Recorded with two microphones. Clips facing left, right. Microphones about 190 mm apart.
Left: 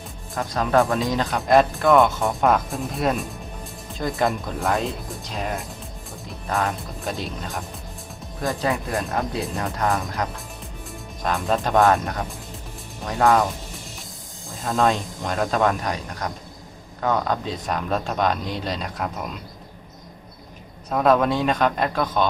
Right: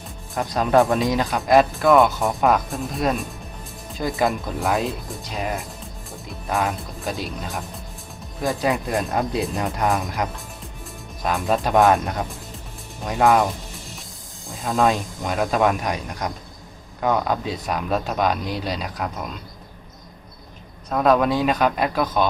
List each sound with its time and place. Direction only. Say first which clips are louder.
0.3 s speech: right 2 dB; 20° right (ahead or behind)
1.2 s speech: left 1 dB; centre (ahead or behind)
8.6 s speech: right 3 dB; 15° right (ahead or behind)
11.2 s speech: right 1 dB; centre (ahead or behind)
13.1 s speech: right 1 dB; 10° right (ahead or behind)
14.6 s speech: right 1 dB; 5° right (ahead or behind)
20.9 s speech: right 1 dB; centre (ahead or behind)